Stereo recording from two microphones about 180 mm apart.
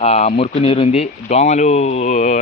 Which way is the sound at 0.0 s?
40° left (ahead or behind).